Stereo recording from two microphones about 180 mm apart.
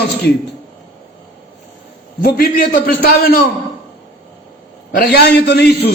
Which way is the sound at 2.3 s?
55° left (ahead or behind).